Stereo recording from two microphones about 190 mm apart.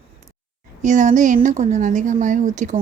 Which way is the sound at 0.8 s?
40° right (ahead or behind).